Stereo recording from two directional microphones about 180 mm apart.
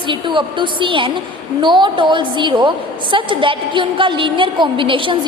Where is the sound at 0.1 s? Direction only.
25° right (ahead or behind).